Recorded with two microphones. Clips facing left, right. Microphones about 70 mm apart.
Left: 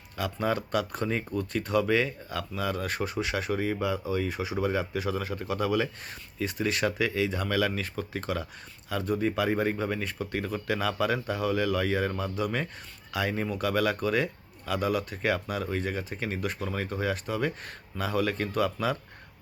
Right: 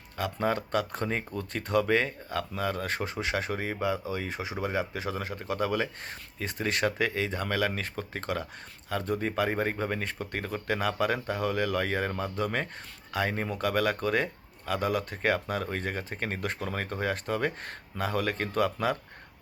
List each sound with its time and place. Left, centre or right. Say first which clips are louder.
0.2 s speech: even; right